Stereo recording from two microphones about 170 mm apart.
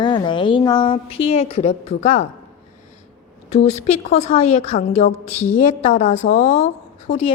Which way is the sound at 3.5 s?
40° left (ahead or behind).